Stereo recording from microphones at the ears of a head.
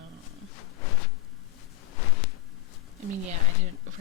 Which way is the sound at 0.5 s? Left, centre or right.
Left.